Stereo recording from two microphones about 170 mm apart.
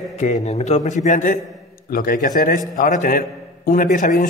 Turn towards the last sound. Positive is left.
turn(degrees=55)  # may be behind; listen again after turning